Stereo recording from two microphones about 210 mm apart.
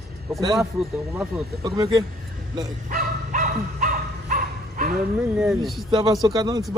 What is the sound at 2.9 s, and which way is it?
Dog, 35° right (ahead or behind).